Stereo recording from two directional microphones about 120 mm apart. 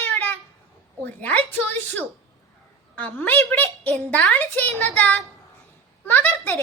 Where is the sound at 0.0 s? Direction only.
15° left (ahead or behind).